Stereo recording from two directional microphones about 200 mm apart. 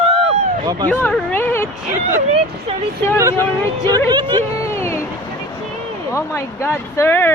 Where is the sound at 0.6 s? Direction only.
20° right (ahead or behind).